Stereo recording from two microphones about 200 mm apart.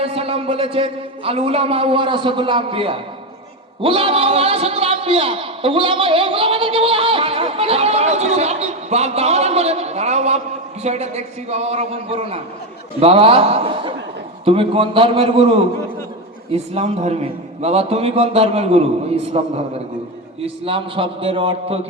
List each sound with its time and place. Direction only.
0.0 s a man's voice: 30° right (ahead or behind)